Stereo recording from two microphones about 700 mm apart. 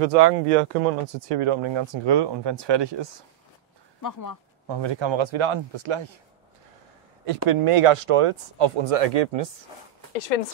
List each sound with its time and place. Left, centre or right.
0.0 s speech: right
4.0 s speech: left
4.6 s speech: right
7.4 s speech: right
10.1 s speech: left